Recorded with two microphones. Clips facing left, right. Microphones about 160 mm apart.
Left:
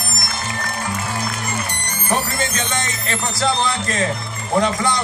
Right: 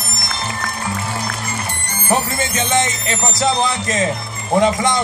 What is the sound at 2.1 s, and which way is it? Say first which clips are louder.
Speech: right 3 dB; 25° right (ahead or behind).